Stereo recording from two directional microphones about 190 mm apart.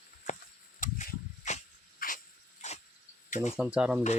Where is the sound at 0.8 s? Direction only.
45° left (ahead or behind).